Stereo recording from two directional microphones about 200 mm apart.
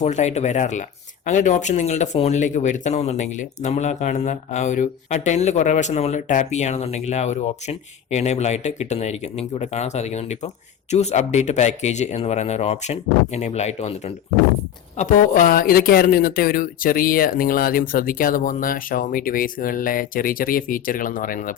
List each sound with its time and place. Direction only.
0.0 s speech: 35° left (ahead or behind)
14.9 s speech: 40° left (ahead or behind)